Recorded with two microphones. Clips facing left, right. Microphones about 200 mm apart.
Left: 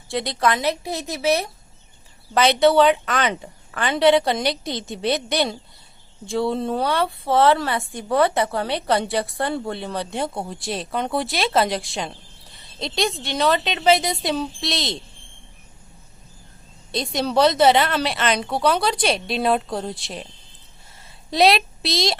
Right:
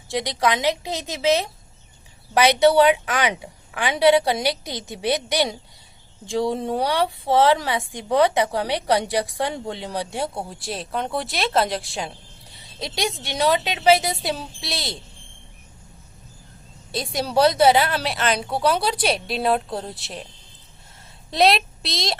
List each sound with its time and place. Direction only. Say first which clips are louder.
0.1 s a woman's voice: even; 15° right (ahead or behind)
16.9 s a woman's voice: left 1 dB; 5° right (ahead or behind)
21.2 s speech: left 1 dB; centre (ahead or behind)